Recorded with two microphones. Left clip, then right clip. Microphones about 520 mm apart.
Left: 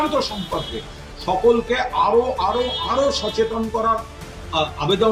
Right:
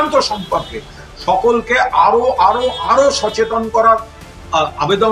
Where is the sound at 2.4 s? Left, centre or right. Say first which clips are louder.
Right 8 dB; left.